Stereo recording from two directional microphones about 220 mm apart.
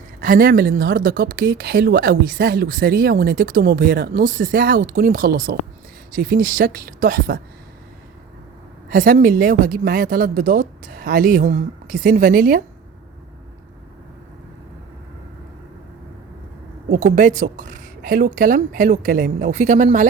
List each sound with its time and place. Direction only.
0.2 s speech: 40° right (ahead or behind)
8.9 s speech: 40° right (ahead or behind)
16.9 s speech: 35° right (ahead or behind)